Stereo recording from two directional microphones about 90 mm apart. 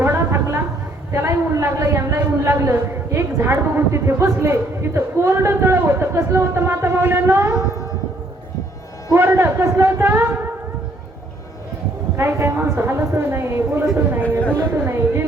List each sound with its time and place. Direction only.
0.0 s a sound: 30° right (ahead or behind)
1.1 s a man's voice: 30° right (ahead or behind)
9.1 s a man's voice: 30° right (ahead or behind)
12.1 s a man's voice: 30° right (ahead or behind)
14.3 s speech: 15° left (ahead or behind)
14.7 s a man's voice: 30° right (ahead or behind)